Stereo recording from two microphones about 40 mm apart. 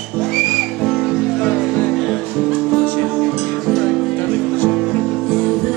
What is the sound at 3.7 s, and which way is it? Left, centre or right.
Music, centre.